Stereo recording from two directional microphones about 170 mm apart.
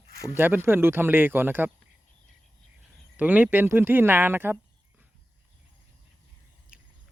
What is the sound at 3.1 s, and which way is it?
Speech, 10° right (ahead or behind).